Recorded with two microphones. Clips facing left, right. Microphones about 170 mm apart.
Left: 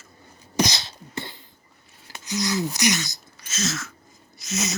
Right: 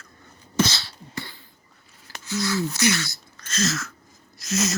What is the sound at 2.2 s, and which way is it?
Speech, 20° left (ahead or behind).